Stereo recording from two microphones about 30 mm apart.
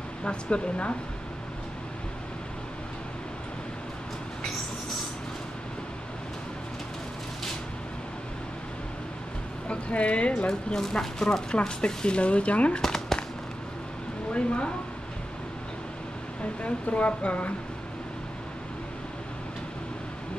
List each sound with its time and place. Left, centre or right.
0.2 s speech: left
9.7 s speech: left
10.8 s speech: centre
11.5 s speech: left
12.8 s fireworks: centre
14.3 s speech: left
16.6 s speech: left